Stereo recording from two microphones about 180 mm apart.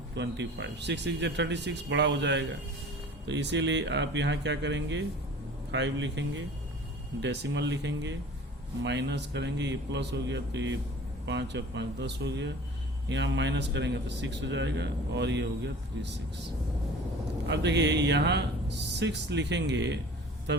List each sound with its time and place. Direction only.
0.2 s a man's voice: 75° right (ahead or behind)
7.2 s a man's voice: 75° right (ahead or behind)
13.1 s a man's voice: 90° right
17.5 s a man's voice: 75° right (ahead or behind)